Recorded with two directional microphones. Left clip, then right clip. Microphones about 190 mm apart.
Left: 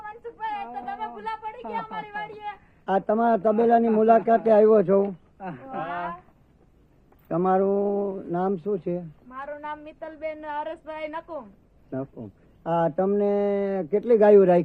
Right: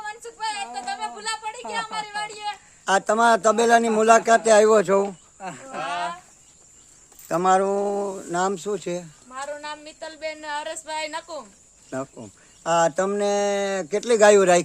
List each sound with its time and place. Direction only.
0.3 s a sound: 35° right (ahead or behind)
1.7 s a woman's voice: 20° right (ahead or behind)
3.1 s speech: 10° right (ahead or behind)
5.4 s cricket: 15° right (ahead or behind)
7.3 s speech: 10° right (ahead or behind)
8.0 s a woman's voice: 25° right (ahead or behind)
8.3 s speech: 10° right (ahead or behind)
9.3 s a woman's voice: 40° right (ahead or behind)
12.6 s speech: 5° right (ahead or behind)